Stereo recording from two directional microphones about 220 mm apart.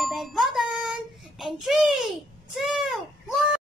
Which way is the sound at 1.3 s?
Centre (ahead or behind).